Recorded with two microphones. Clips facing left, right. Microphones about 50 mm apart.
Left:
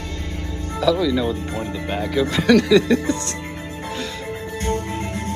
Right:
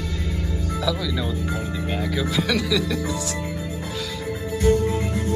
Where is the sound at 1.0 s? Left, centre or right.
Centre.